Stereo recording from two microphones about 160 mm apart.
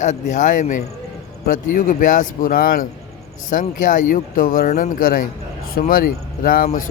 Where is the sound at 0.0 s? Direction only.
50° left (ahead or behind).